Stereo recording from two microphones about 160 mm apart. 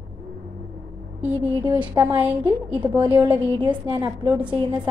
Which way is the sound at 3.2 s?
30° right (ahead or behind).